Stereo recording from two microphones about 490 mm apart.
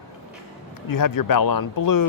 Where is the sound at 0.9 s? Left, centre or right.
Left.